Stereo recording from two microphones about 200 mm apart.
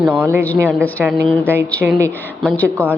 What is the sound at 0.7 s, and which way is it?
A woman's voice, 10° left (ahead or behind).